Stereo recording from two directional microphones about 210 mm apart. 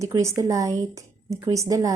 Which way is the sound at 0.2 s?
15° right (ahead or behind).